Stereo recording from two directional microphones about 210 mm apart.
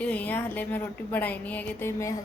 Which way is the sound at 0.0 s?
5° left (ahead or behind).